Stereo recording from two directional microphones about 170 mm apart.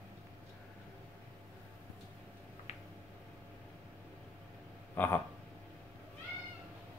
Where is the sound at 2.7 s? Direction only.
40° left (ahead or behind).